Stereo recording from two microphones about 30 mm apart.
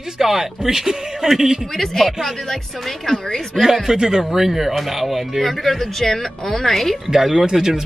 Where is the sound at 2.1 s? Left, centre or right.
Centre.